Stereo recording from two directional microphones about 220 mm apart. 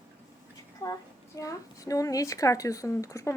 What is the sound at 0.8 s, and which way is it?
A woman's voice, 15° left (ahead or behind).